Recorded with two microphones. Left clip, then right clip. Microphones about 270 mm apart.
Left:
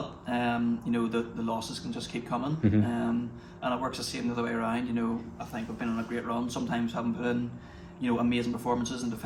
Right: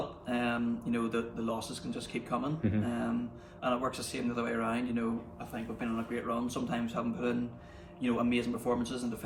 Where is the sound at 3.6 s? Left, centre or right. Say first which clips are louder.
Left 1 dB; centre.